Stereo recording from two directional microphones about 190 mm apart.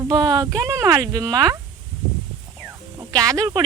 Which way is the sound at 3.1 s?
20° right (ahead or behind).